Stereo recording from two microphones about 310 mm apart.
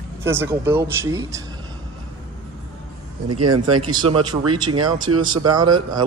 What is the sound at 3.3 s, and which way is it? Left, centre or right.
Speech, right.